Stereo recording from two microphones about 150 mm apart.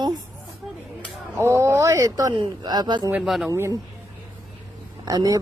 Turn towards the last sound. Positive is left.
turn(degrees=-25)  # may be behind; listen again after turning